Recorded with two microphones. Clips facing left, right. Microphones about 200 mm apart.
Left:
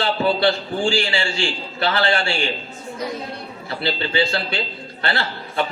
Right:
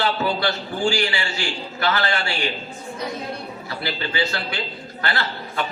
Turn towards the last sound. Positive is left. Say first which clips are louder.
# left 2 dB
turn(degrees=25)  # may be behind; listen again after turning